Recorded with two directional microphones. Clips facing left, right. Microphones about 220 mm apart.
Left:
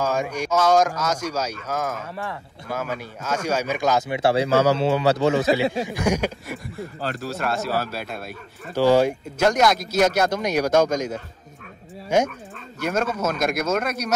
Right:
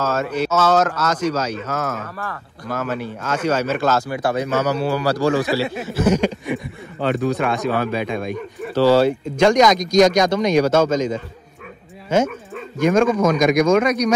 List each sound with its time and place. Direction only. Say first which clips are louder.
0.0 s speech: right 3 dB; 15° left (ahead or behind)
4.2 s speech: left 2 dB; 30° left (ahead or behind); by 14.1 s 5° left (ahead or behind)